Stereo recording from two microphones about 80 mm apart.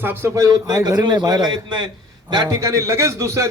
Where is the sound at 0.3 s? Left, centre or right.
Right.